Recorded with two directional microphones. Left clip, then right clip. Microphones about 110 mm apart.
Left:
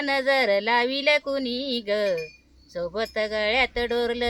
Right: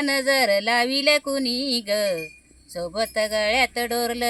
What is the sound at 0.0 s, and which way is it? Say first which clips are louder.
Speech: right 1 dB; 20° left (ahead or behind).